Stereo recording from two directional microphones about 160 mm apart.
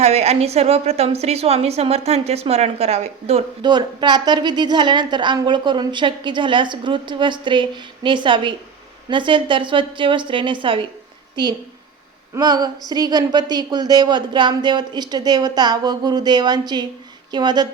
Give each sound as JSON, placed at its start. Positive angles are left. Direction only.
{"t": 0.0, "sound": "a woman's voice", "side_deg": -40}
{"t": 3.6, "sound": "a woman's voice", "side_deg": -25}
{"t": 12.3, "sound": "a woman's voice", "side_deg": -25}